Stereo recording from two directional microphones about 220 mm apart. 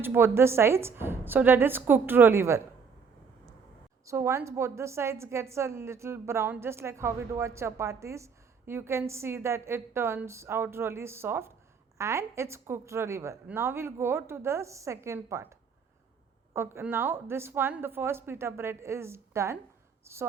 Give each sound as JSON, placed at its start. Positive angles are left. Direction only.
{"t": 0.0, "sound": "a woman's voice", "side_deg": -10}
{"t": 4.0, "sound": "a woman's voice", "side_deg": -10}
{"t": 16.6, "sound": "a woman's voice", "side_deg": -10}